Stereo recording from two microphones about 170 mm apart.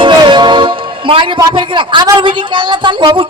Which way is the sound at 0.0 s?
30° right (ahead or behind).